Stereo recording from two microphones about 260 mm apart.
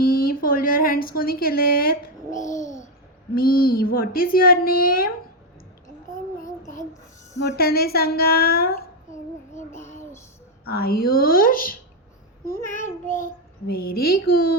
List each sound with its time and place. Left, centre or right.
0.0 s speech: left
2.3 s a child's voice: centre
3.3 s a child's voice: left
7.5 s a child's voice: left
9.6 s a child's voice: centre
10.7 s a child's voice: left